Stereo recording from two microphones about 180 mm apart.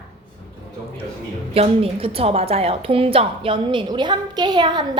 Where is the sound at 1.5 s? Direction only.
30° right (ahead or behind).